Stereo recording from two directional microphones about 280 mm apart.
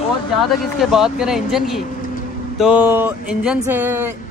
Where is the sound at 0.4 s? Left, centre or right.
Centre.